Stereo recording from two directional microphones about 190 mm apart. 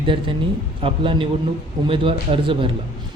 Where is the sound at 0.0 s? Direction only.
25° right (ahead or behind).